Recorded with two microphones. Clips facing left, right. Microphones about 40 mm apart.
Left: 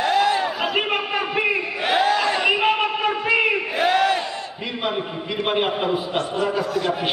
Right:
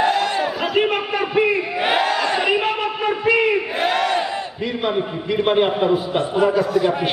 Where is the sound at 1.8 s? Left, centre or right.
Centre.